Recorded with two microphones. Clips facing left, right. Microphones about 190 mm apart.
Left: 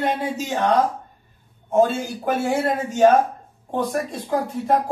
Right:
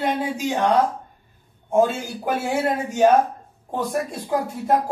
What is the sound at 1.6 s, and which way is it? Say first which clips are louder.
A man's voice: left 1 dB; 10° right (ahead or behind).